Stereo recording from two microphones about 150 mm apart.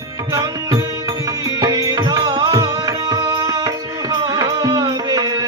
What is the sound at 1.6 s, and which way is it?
Tabla, 25° right (ahead or behind).